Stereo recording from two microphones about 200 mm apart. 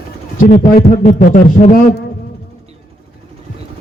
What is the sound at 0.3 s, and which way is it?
A man's voice, 40° left (ahead or behind).